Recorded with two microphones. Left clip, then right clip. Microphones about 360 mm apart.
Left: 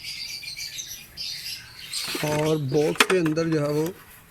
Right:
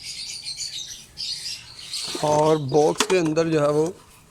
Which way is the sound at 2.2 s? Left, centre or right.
Right.